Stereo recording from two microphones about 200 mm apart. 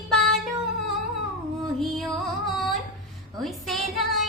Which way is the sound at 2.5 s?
Centre (ahead or behind).